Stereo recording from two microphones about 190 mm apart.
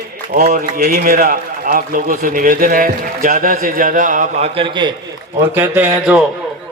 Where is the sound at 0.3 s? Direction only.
50° right (ahead or behind).